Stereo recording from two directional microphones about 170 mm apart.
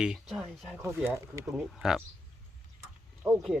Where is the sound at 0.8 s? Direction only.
15° right (ahead or behind).